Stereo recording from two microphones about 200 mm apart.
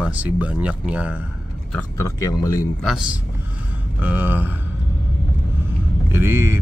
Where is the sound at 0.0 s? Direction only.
5° right (ahead or behind).